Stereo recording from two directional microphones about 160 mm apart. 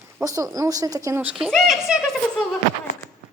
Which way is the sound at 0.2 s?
20° right (ahead or behind).